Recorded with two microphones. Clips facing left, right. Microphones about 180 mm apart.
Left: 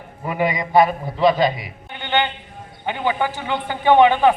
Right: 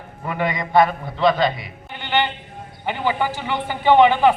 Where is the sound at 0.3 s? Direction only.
15° left (ahead or behind).